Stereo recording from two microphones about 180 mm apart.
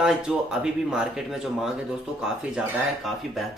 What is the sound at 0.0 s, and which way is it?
Speech, 5° right (ahead or behind).